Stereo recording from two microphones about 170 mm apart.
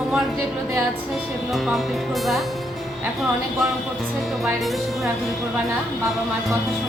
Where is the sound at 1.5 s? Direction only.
Centre (ahead or behind).